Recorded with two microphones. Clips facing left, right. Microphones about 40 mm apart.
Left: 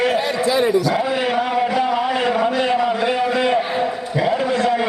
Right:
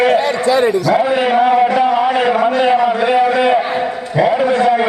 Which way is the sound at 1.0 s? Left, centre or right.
Centre.